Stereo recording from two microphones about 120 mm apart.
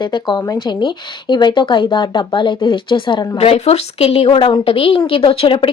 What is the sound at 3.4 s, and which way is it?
A woman's voice, 60° left (ahead or behind).